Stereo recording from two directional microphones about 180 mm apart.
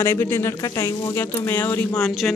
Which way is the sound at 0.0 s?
15° left (ahead or behind).